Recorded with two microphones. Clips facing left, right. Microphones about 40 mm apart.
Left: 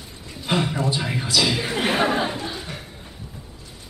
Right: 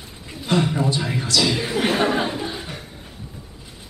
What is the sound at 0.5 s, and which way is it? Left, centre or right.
Speech, centre.